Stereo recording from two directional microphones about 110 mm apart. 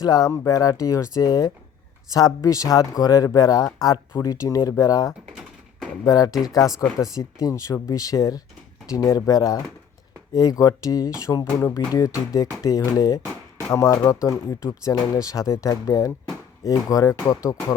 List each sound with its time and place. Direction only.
0.0 s speech: 35° left (ahead or behind)